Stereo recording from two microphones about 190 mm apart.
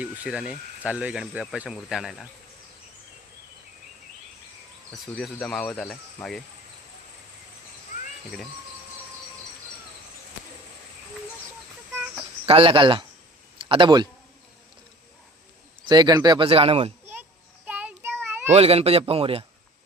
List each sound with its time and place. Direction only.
0.0 s speech: 5° right (ahead or behind)
5.1 s speech: 5° left (ahead or behind)
12.5 s speech: 30° right (ahead or behind)
15.9 s speech: 20° right (ahead or behind)
17.7 s child singing: 10° right (ahead or behind)
18.2 s a sound: 10° right (ahead or behind)
18.5 s a man's voice: 30° right (ahead or behind)